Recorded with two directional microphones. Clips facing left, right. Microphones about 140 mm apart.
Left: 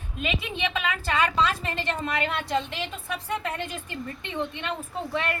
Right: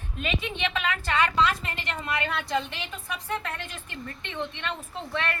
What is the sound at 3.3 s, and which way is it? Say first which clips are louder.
A woman's voice: left 3 dB; 15° left (ahead or behind).